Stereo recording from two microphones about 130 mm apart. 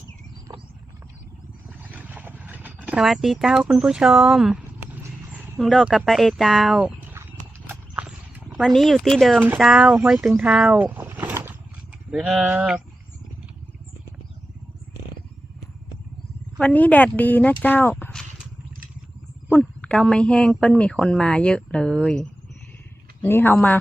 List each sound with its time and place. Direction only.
1.9 s vehicle: 10° right (ahead or behind)
3.0 s speech: centre (ahead or behind)
6.7 s a sound: 15° right (ahead or behind)
7.7 s clip-clop: 10° right (ahead or behind)
8.5 s speech: centre (ahead or behind)
10.8 s a sound: 15° right (ahead or behind)
12.1 s speech: centre (ahead or behind)
16.6 s speech: 10° left (ahead or behind)
19.5 s speech: 15° left (ahead or behind)
23.2 s speech: 15° left (ahead or behind)